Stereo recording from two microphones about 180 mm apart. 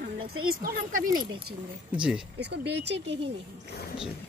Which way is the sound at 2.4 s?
70° right (ahead or behind).